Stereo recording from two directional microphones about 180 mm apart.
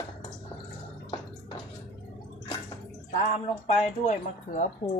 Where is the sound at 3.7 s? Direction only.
40° left (ahead or behind).